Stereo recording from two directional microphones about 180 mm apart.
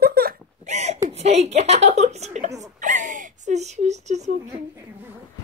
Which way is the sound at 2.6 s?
45° right (ahead or behind).